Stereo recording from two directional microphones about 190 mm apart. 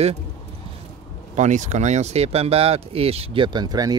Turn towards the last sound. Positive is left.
turn(degrees=-20)  # may be behind; listen again after turning